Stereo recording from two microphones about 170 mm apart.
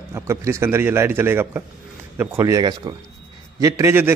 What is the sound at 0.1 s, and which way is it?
A man's voice, 15° right (ahead or behind).